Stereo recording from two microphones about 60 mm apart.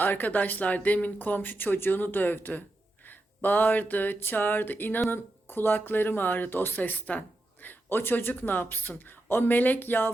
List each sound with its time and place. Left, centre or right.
0.0 s speech: left